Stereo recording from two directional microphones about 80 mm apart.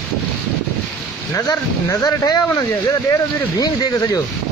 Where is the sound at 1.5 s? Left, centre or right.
Left.